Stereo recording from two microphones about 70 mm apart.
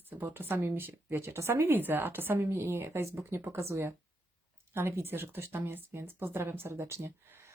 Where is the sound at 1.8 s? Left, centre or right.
Right.